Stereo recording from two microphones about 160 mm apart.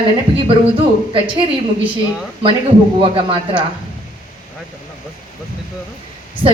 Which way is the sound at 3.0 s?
35° right (ahead or behind).